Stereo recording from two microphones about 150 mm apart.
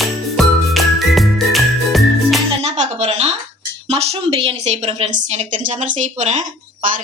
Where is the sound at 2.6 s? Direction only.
45° right (ahead or behind).